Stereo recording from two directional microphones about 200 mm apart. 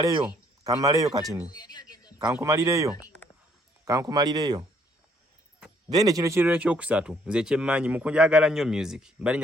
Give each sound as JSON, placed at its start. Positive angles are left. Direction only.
{"t": 0.6, "sound": "speech", "side_deg": -15}
{"t": 1.5, "sound": "a sound", "side_deg": 20}
{"t": 2.1, "sound": "speech", "side_deg": -15}
{"t": 5.9, "sound": "speech", "side_deg": -20}